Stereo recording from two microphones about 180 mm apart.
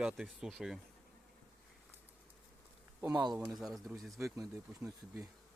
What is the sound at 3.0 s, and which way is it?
Speech, 20° right (ahead or behind).